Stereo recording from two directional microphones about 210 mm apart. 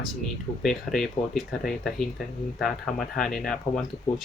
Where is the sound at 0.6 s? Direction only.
Centre (ahead or behind).